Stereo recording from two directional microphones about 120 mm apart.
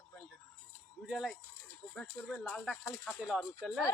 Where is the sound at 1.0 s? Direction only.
Centre (ahead or behind).